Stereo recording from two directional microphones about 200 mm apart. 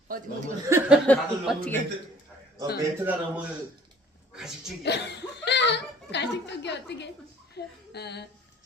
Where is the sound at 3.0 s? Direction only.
10° right (ahead or behind).